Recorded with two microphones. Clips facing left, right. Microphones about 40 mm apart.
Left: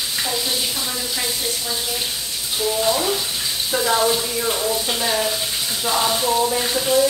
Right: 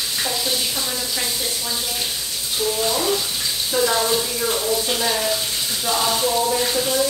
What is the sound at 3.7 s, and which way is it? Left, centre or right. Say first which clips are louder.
Speech: left 1 dB; centre.